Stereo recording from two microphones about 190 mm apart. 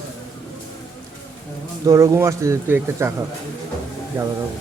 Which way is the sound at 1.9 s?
15° right (ahead or behind).